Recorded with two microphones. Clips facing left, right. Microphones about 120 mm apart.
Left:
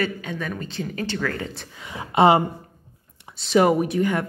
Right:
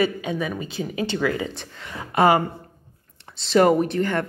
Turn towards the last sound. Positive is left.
turn(degrees=5)  # may be behind; listen again after turning